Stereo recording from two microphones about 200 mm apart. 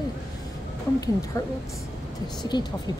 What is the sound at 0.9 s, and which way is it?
Speech, 15° left (ahead or behind).